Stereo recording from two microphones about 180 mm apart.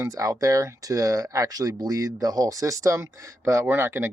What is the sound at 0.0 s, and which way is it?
Speech, 20° right (ahead or behind).